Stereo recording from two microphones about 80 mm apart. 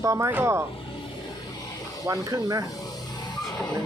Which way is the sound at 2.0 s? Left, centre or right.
Right.